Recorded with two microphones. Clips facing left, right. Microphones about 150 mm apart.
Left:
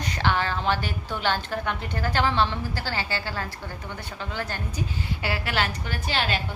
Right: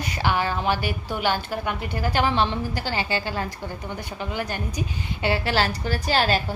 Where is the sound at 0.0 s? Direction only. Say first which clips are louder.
Right 1 dB; 10° right (ahead or behind).